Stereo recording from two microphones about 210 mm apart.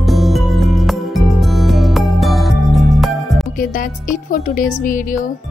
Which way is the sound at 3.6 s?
40° left (ahead or behind).